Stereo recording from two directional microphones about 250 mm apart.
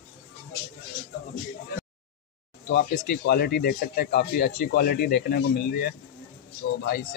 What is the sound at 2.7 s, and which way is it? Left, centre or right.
Speech, left.